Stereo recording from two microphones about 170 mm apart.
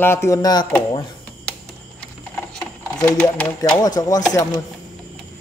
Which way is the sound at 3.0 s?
10° left (ahead or behind).